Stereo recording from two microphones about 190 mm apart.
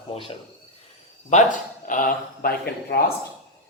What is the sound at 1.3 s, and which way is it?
Speech, 45° left (ahead or behind).